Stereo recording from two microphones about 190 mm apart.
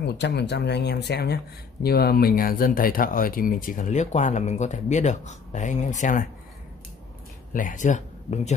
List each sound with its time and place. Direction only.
0.0 s speech: 60° left (ahead or behind); by 6.2 s 40° left (ahead or behind)
7.5 s speech: 45° left (ahead or behind)